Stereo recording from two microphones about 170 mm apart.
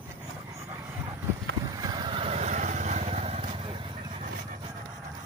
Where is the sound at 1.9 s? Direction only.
35° right (ahead or behind).